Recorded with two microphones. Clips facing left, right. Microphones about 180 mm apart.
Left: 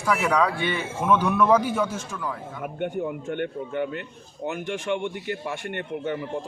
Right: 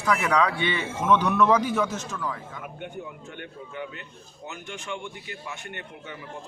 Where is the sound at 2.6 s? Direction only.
55° left (ahead or behind).